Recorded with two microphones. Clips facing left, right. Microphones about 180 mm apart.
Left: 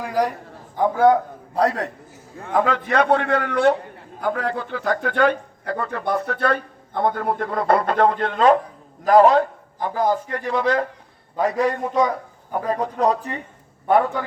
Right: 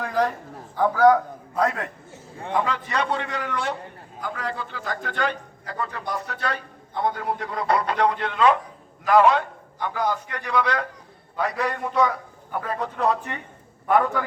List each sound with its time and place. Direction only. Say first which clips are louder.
0.0 s a sound: left 2 dB; 10° left (ahead or behind)
0.8 s a man's voice: left 1 dB; 25° left (ahead or behind)
2.5 s a man's voice: left 5 dB; 50° left (ahead or behind)
11.6 s a man's voice: left 2 dB; 30° left (ahead or behind)